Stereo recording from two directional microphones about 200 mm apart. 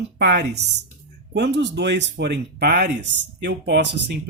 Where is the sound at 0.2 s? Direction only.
60° right (ahead or behind).